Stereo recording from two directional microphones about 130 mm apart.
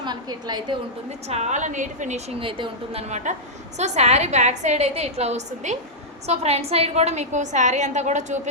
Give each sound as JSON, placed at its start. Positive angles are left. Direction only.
{"t": 0.0, "sound": "a woman's voice", "side_deg": -35}
{"t": 1.3, "sound": "a woman's voice", "side_deg": -60}
{"t": 2.4, "sound": "a woman's voice", "side_deg": -40}